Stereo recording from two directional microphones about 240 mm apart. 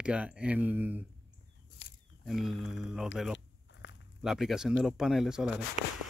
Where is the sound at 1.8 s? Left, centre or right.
Left.